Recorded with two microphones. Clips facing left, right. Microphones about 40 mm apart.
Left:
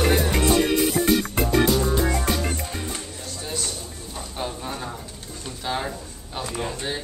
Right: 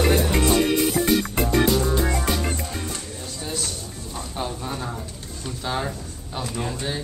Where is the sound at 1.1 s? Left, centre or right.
Centre.